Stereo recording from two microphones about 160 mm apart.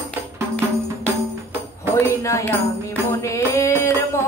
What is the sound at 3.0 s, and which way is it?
Music, 20° left (ahead or behind).